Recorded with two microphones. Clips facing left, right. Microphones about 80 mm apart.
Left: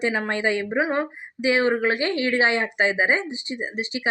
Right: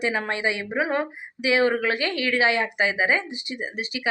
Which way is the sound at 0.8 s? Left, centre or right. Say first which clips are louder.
Left 1 dB; left.